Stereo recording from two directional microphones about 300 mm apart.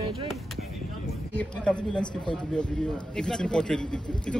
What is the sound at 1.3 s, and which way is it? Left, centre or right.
Speech, centre.